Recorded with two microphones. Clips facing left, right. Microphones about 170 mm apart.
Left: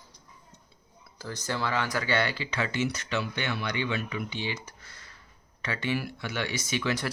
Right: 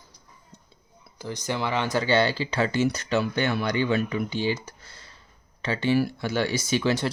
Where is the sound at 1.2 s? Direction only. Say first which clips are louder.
Right 3 dB; 15° right (ahead or behind).